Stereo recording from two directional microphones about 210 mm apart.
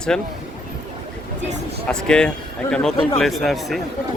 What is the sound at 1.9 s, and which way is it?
Speech, 5° left (ahead or behind).